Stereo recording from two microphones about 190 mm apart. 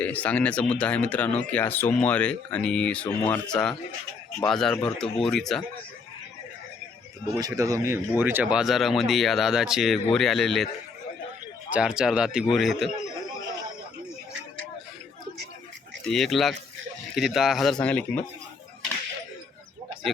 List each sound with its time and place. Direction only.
0.0 s speech: 10° left (ahead or behind)
7.3 s speech: 20° right (ahead or behind); by 10.7 s centre (ahead or behind)
11.7 s speech: 5° right (ahead or behind)
16.0 s speech: centre (ahead or behind)